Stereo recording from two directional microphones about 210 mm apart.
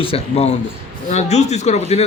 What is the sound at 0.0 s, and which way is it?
Speech, 30° left (ahead or behind).